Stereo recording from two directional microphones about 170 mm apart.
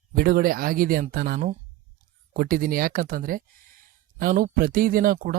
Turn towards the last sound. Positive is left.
turn(degrees=-55)  # may be behind; listen again after turning